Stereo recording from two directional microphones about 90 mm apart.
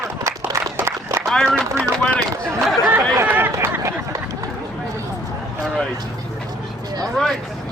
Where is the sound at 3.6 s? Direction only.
30° right (ahead or behind).